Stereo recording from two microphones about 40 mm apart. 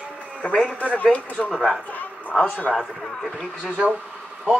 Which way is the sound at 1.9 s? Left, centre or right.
Left.